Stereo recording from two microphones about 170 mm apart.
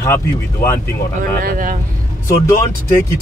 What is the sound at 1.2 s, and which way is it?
Speech, 55° right (ahead or behind).